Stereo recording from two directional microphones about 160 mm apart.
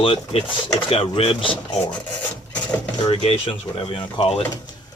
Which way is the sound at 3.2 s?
35° left (ahead or behind).